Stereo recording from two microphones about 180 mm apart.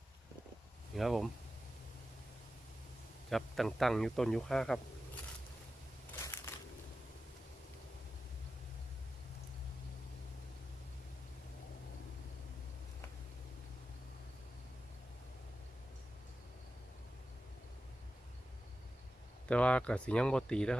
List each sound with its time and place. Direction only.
0.9 s a man's voice: centre (ahead or behind)
3.2 s a man's voice: centre (ahead or behind)
6.1 s crushing: 15° left (ahead or behind)
19.5 s a man's voice: 5° left (ahead or behind)